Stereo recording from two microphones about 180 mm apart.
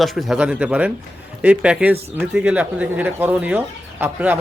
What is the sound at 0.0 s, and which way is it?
Speech, centre (ahead or behind).